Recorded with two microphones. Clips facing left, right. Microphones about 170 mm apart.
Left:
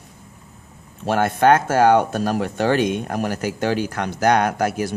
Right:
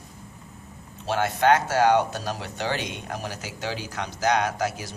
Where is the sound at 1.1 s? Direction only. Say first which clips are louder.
Left 5 dB; 55° left (ahead or behind).